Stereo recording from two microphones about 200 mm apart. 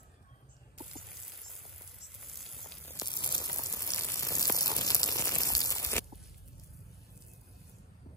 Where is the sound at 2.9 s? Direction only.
20° left (ahead or behind).